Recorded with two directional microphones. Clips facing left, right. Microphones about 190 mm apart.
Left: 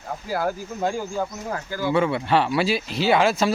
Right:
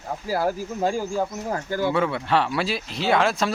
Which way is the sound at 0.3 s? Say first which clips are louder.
Right 2 dB; 10° right (ahead or behind).